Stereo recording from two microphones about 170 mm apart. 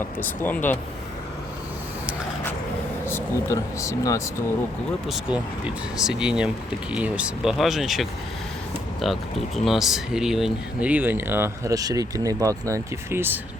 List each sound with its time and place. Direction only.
0.2 s speech: 10° left (ahead or behind)
3.1 s speech: 15° left (ahead or behind)
5.0 s speech: 5° right (ahead or behind)